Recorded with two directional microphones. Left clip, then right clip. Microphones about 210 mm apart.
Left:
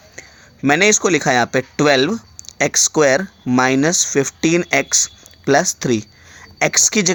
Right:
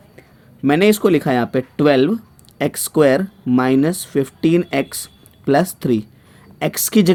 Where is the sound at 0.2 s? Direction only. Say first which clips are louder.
Even; 25° left (ahead or behind).